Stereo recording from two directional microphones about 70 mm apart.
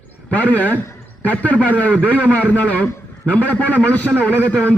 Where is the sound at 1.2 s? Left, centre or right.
Centre.